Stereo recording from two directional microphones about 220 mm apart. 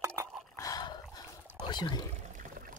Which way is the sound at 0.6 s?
15° left (ahead or behind).